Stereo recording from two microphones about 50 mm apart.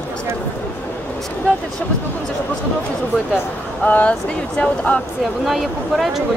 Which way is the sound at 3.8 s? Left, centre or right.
Left.